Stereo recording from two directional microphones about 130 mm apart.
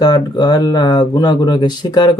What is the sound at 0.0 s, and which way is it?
Speech, 30° left (ahead or behind).